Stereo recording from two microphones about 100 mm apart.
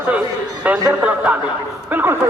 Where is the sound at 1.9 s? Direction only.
20° right (ahead or behind).